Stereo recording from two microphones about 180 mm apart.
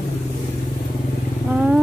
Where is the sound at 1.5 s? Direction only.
5° right (ahead or behind).